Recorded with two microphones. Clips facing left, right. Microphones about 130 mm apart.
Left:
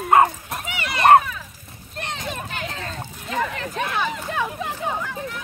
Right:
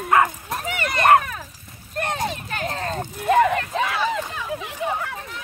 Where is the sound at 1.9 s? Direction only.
50° right (ahead or behind).